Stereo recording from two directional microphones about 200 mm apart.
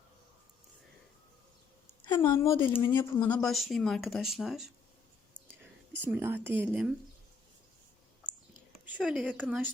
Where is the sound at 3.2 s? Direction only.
5° left (ahead or behind).